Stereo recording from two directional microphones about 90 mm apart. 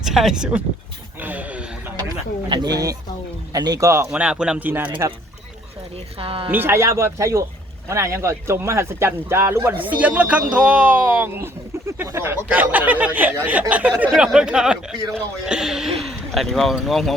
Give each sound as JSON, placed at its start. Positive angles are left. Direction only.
{"t": 0.0, "sound": "speech", "side_deg": -5}
{"t": 2.5, "sound": "speech", "side_deg": -45}
{"t": 4.1, "sound": "speech", "side_deg": -10}
{"t": 4.6, "sound": "speech", "side_deg": -20}
{"t": 6.1, "sound": "speech", "side_deg": -90}
{"t": 6.5, "sound": "speech", "side_deg": -25}
{"t": 9.8, "sound": "speech", "side_deg": -15}